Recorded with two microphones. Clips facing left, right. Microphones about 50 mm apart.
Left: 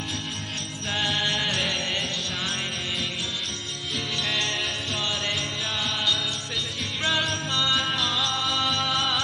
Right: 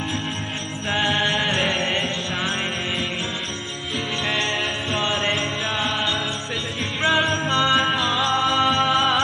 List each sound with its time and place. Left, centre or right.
0.9 s music: right
4.9 s jingle bell: right
7.0 s music: right
7.9 s music: centre